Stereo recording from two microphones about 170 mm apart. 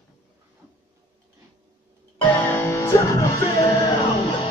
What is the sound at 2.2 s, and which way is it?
Music, 10° left (ahead or behind).